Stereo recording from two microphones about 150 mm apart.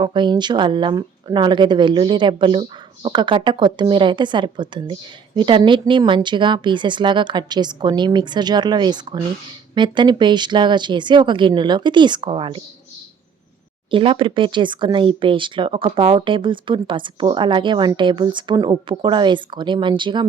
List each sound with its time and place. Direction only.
0.0 s speech: 30° right (ahead or behind)
13.9 s speech: 35° right (ahead or behind)